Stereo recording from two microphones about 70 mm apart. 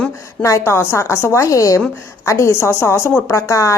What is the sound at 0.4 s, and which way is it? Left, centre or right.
A woman's voice, left.